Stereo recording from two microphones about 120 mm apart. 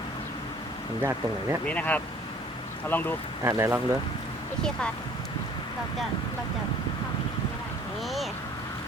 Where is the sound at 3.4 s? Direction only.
20° right (ahead or behind).